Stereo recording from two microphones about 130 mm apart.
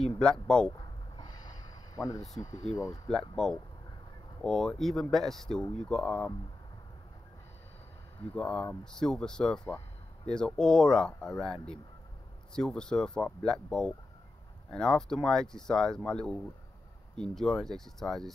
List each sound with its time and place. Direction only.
0.2 s speech: 5° left (ahead or behind)
0.7 s a sound: 35° left (ahead or behind)
3.1 s speech: 5° left (ahead or behind)
8.2 s speech: 5° left (ahead or behind)